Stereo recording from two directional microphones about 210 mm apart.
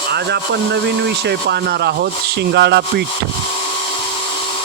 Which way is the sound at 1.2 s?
50° right (ahead or behind).